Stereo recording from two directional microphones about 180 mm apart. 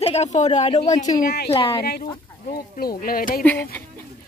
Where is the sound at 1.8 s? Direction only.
60° left (ahead or behind).